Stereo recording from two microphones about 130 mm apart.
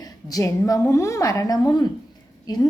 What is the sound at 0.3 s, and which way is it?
A woman's voice, 25° left (ahead or behind).